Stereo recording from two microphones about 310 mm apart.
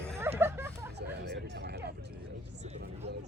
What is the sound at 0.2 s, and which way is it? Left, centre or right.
Hubbub, centre.